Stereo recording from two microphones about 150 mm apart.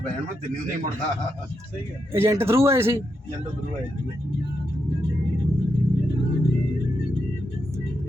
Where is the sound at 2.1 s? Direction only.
15° right (ahead or behind).